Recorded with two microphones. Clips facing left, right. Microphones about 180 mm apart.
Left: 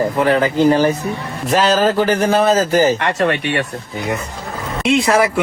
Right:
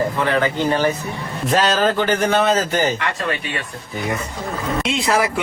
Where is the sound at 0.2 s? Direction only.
35° left (ahead or behind).